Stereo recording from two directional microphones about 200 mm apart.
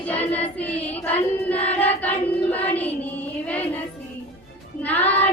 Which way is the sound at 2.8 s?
10° left (ahead or behind).